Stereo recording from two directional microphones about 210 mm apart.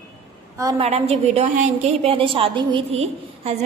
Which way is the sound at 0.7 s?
30° right (ahead or behind).